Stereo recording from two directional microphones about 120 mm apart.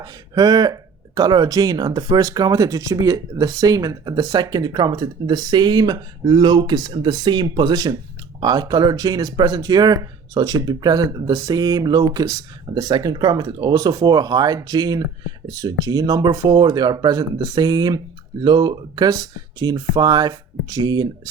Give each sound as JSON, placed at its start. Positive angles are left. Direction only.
{"t": 0.0, "sound": "speech", "side_deg": -35}